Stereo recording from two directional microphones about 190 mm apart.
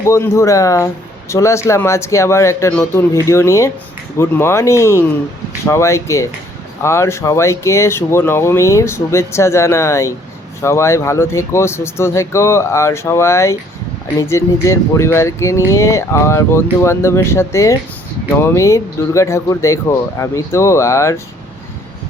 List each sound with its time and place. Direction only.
0.0 s speech: 15° left (ahead or behind)